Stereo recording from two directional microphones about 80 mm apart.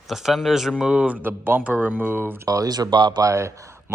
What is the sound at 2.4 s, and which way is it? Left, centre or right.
Speech, right.